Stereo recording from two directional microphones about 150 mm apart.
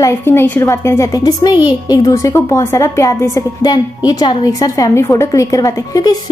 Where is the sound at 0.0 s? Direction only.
15° left (ahead or behind).